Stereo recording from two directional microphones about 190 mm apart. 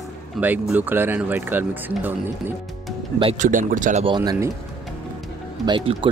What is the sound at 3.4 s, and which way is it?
Speech, 45° right (ahead or behind).